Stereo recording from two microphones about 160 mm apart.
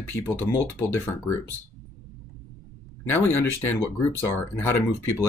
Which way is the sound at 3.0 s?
15° left (ahead or behind).